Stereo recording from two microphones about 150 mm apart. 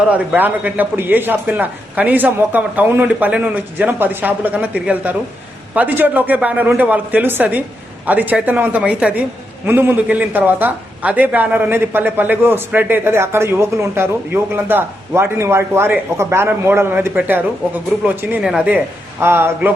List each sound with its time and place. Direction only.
0.1 s a man's voice: 10° right (ahead or behind)